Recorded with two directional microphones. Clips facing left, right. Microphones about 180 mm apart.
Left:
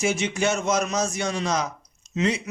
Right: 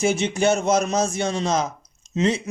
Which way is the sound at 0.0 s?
30° right (ahead or behind).